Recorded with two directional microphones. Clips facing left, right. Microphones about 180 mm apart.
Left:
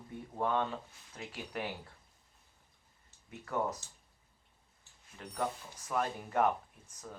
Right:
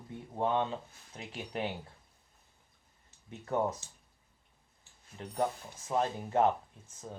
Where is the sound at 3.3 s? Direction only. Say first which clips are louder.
Right 3 dB; 25° right (ahead or behind).